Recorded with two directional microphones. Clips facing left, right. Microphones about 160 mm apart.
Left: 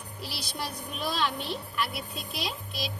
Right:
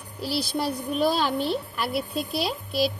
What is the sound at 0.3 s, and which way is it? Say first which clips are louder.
A woman's voice: right 11 dB; 35° right (ahead or behind).